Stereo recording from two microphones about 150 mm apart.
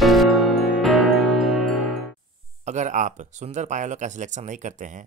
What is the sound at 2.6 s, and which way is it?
Speech, 55° right (ahead or behind).